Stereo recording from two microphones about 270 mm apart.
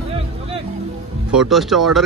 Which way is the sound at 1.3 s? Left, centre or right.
Centre.